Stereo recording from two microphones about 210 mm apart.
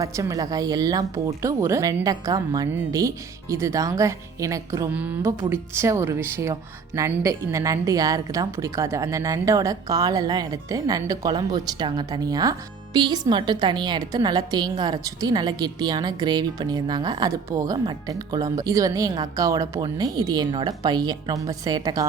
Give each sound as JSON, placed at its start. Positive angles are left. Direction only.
{"t": 0.0, "sound": "speech", "side_deg": -15}